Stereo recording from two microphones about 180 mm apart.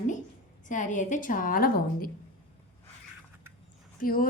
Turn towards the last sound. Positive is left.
turn(degrees=55)  # may be behind; listen again after turning